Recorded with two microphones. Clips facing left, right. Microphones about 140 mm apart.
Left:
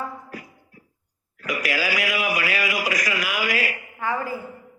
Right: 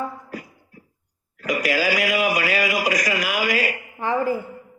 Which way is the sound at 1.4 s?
35° right (ahead or behind).